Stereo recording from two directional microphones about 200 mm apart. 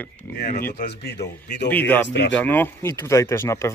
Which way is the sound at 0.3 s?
50° left (ahead or behind).